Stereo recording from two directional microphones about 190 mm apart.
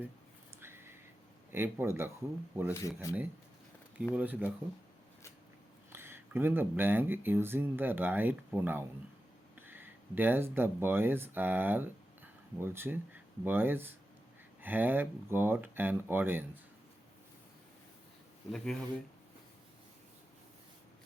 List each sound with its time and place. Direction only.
0.6 s a sound: 10° right (ahead or behind)
1.5 s speech: 15° right (ahead or behind)
2.7 s speech: 15° left (ahead or behind)
4.1 s speech: 10° right (ahead or behind)
5.9 s speech: 10° right (ahead or behind)
18.5 s speech: 5° left (ahead or behind)